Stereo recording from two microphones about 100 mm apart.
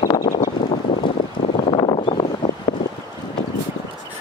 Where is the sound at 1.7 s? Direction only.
60° left (ahead or behind).